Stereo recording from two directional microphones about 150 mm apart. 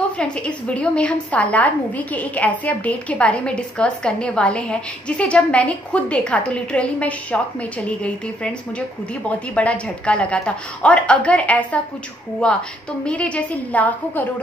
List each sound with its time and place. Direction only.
0.2 s a woman's voice: 5° left (ahead or behind)
9.6 s a woman's voice: 10° left (ahead or behind)